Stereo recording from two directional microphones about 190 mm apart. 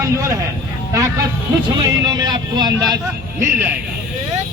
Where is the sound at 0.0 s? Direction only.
15° right (ahead or behind).